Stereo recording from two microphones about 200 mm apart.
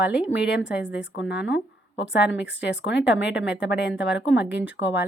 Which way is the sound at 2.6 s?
65° left (ahead or behind).